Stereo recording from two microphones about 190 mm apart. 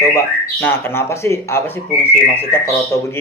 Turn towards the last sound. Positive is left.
turn(degrees=15)  # may be behind; listen again after turning